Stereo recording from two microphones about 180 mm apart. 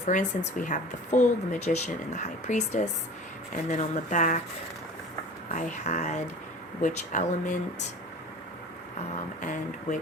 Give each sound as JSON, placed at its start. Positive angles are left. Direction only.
{"t": 0.0, "sound": "a woman's voice", "side_deg": 45}
{"t": 5.5, "sound": "a woman's voice", "side_deg": 45}
{"t": 9.4, "sound": "speech", "side_deg": 45}